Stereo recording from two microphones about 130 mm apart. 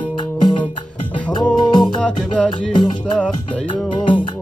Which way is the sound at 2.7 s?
35° left (ahead or behind).